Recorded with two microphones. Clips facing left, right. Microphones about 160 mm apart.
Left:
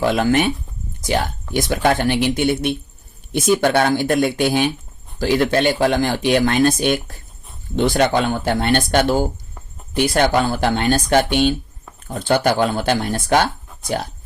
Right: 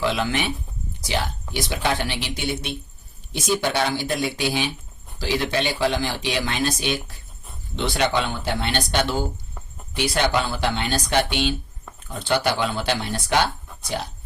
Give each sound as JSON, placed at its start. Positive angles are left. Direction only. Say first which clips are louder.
{"t": 0.0, "sound": "speech", "louder": "left 7 dB", "side_deg": 50}